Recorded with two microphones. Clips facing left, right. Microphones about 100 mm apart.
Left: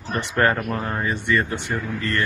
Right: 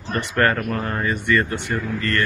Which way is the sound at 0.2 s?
20° left (ahead or behind).